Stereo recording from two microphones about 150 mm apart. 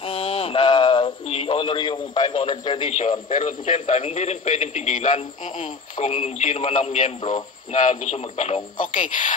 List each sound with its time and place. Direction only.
0.0 s speech: 40° left (ahead or behind)
3.3 s a man's voice: 55° left (ahead or behind)